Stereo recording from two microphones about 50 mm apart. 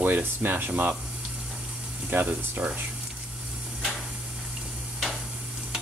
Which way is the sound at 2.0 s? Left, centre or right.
Right.